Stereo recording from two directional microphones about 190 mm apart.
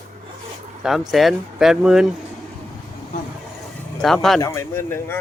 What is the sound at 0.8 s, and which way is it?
Speech, centre (ahead or behind).